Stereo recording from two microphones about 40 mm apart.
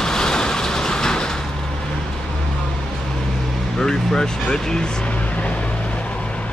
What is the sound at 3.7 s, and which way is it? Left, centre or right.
Speech, centre.